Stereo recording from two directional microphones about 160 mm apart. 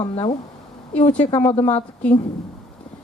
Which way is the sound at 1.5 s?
40° left (ahead or behind).